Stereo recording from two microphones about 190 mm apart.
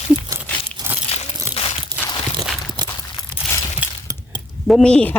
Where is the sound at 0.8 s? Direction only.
20° right (ahead or behind).